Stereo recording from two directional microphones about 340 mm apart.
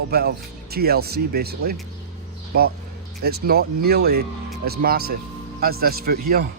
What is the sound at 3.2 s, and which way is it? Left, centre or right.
Speech, right.